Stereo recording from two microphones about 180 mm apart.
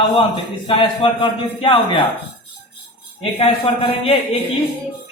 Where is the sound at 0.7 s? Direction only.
30° left (ahead or behind).